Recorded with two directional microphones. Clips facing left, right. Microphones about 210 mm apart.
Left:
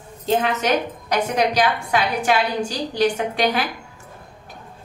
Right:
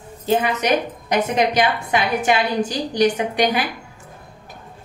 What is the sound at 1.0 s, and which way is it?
A woman's voice, 20° right (ahead or behind).